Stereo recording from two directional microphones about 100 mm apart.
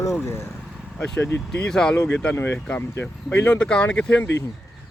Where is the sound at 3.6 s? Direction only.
10° left (ahead or behind).